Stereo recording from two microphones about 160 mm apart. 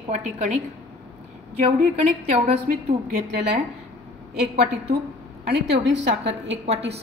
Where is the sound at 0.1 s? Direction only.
45° right (ahead or behind).